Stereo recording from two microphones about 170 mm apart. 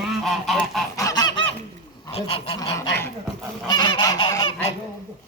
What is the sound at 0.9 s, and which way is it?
Goose, 20° left (ahead or behind).